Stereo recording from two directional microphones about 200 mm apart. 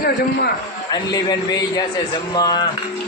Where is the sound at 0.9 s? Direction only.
20° left (ahead or behind).